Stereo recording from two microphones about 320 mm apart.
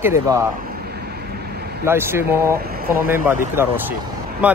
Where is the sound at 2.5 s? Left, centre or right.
Right.